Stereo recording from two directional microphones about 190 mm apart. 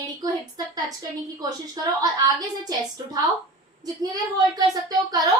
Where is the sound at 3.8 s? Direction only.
20° right (ahead or behind).